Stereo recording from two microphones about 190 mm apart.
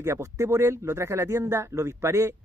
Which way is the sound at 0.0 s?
15° right (ahead or behind).